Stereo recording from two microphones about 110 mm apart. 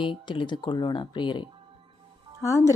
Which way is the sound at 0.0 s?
50° left (ahead or behind).